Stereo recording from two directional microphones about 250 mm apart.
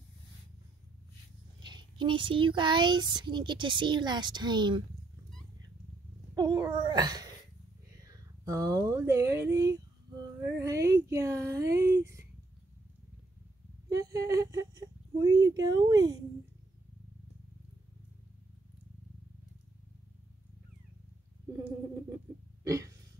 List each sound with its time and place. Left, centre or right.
1.6 s speech: centre
6.3 s a child's voice: centre
13.8 s speech: centre
22.6 s a sound: centre